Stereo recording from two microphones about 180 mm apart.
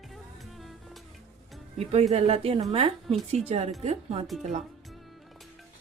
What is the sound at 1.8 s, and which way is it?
A woman's voice, 35° right (ahead or behind).